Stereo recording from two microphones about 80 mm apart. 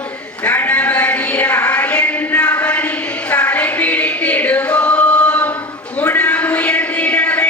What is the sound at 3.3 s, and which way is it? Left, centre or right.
Choir, centre.